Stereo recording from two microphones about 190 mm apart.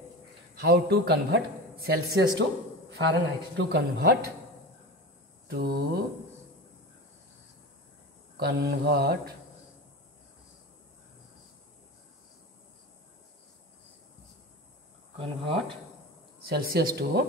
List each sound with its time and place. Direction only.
0.6 s a man's voice: 60° right (ahead or behind)
5.5 s a man's voice: 55° right (ahead or behind)
8.4 s a man's voice: 55° right (ahead or behind)
15.1 s speech: 25° right (ahead or behind)
16.4 s a man's voice: 55° right (ahead or behind)